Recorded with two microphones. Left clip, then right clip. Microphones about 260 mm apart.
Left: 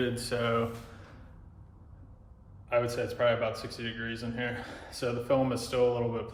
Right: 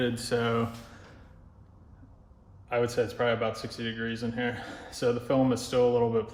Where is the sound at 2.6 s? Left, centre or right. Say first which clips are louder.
Right 2 dB; right.